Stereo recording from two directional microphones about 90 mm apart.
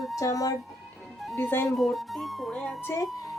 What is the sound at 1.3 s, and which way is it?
Speech, 25° left (ahead or behind).